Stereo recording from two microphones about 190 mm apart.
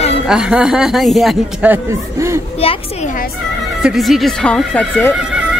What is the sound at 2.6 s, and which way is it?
Speech, 30° left (ahead or behind).